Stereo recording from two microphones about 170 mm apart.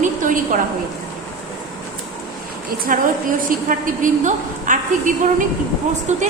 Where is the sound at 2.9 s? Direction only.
55° right (ahead or behind).